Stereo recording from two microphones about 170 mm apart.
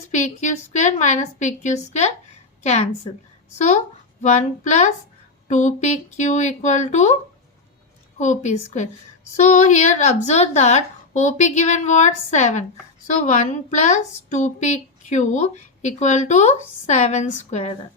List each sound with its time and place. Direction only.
0.1 s speech: 45° left (ahead or behind)
4.2 s speech: 45° left (ahead or behind)
8.2 s a woman's voice: 45° left (ahead or behind)